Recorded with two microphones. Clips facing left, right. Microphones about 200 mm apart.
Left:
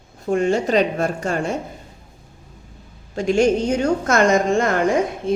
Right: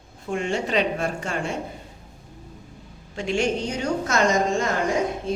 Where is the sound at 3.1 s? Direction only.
40° left (ahead or behind).